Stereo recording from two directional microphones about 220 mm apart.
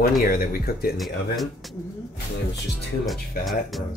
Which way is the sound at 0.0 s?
40° left (ahead or behind).